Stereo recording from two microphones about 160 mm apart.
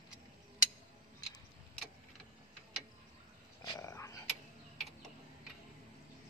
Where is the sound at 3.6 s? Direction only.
25° left (ahead or behind).